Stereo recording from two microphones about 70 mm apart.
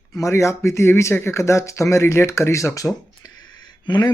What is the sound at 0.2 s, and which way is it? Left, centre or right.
Speech, left.